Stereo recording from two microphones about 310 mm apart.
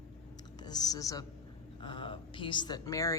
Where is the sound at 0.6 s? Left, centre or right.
Centre.